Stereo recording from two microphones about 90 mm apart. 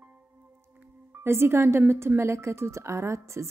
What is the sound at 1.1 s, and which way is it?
Speech, 30° right (ahead or behind).